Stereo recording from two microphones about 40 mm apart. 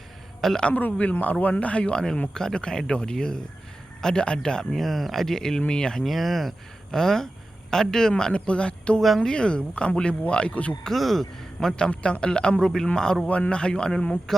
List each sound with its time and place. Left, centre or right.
0.7 s speech: left
4.7 s speech: centre
6.0 s speech: centre
6.9 s speech: centre
8.3 s speech: left
9.0 s speech: centre
9.2 s speech: left
10.9 s speech: centre
11.8 s speech: left
13.2 s speech: left
14.3 s speech: centre